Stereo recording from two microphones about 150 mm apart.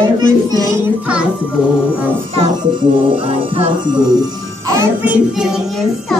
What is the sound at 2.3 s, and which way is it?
Music, 35° right (ahead or behind).